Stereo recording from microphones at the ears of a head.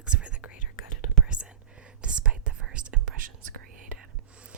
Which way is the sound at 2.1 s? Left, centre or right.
Right.